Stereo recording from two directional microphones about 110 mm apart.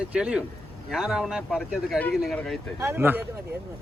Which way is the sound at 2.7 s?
20° right (ahead or behind).